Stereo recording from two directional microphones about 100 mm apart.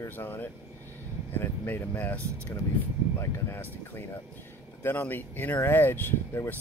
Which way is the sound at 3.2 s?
25° left (ahead or behind).